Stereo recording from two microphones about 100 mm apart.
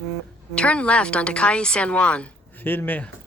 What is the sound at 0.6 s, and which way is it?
A woman's voice, 10° left (ahead or behind).